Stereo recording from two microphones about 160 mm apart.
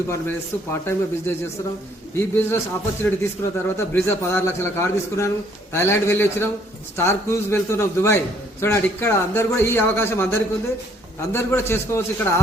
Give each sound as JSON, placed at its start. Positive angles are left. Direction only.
{"t": 0.1, "sound": "speech", "side_deg": 15}
{"t": 2.1, "sound": "speech", "side_deg": 15}